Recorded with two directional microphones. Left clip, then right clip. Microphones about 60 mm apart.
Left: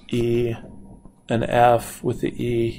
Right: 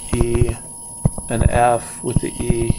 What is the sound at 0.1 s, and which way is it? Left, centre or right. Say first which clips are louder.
Speech: right 1 dB; centre.